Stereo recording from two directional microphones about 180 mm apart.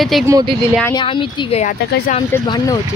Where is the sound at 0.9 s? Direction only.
25° left (ahead or behind).